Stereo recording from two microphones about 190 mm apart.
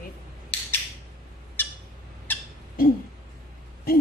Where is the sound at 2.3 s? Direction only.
10° left (ahead or behind).